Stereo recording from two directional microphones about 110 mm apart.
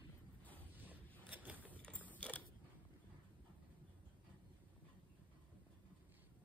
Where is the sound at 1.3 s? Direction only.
15° right (ahead or behind).